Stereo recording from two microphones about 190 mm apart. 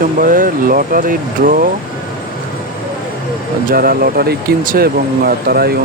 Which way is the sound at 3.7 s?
50° right (ahead or behind).